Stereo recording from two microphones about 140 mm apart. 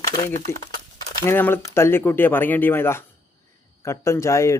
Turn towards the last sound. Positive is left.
turn(degrees=20)  # may be behind; listen again after turning